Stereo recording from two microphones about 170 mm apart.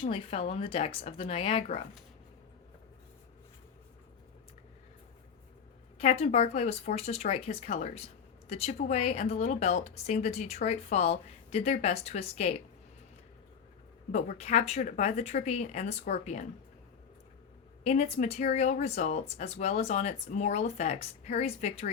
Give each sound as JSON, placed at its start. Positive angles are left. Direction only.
{"t": 0.1, "sound": "speech", "side_deg": 35}
{"t": 6.0, "sound": "speech", "side_deg": 40}
{"t": 14.1, "sound": "speech", "side_deg": 40}
{"t": 17.8, "sound": "speech", "side_deg": 40}